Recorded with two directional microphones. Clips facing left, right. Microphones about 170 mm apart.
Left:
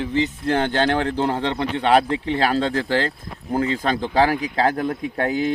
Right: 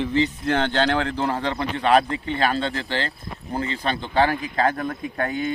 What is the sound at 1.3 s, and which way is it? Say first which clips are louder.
Speech: left 2 dB; 25° left (ahead or behind).